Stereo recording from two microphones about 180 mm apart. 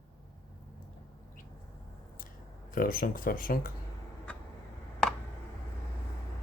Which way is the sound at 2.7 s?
50° left (ahead or behind).